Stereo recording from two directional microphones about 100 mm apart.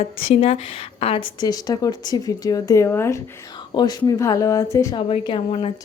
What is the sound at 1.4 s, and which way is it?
Speech, 40° left (ahead or behind).